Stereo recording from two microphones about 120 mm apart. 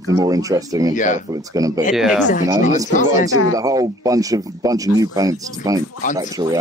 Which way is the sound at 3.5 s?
30° right (ahead or behind).